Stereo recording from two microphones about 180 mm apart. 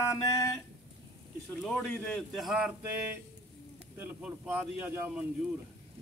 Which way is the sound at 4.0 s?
10° right (ahead or behind).